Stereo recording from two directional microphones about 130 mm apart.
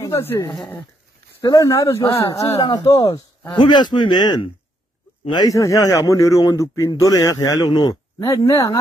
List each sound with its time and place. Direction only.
0.0 s a man's voice: 20° left (ahead or behind)
2.6 s a man's voice: 35° left (ahead or behind)